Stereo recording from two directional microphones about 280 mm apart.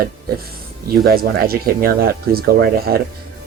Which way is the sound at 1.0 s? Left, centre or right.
Right.